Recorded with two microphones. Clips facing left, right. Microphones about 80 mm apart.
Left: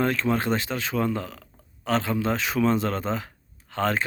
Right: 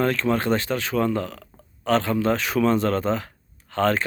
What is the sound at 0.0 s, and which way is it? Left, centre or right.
Speech, centre.